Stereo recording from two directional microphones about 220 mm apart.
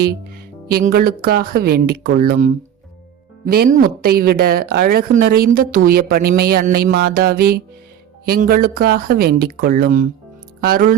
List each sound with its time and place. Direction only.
0.7 s a woman's voice: 45° right (ahead or behind)